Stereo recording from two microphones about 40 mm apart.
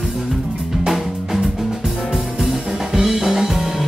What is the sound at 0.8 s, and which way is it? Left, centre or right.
Music, centre.